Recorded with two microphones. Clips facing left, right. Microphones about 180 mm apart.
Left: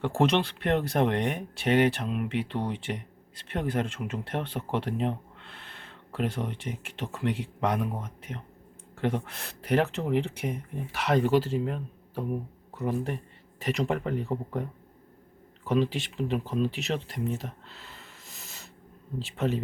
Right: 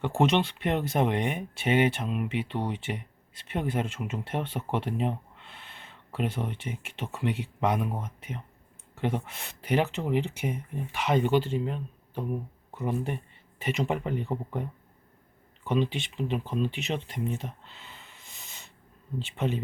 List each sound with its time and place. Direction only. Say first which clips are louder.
0.0 s speech: even; centre (ahead or behind)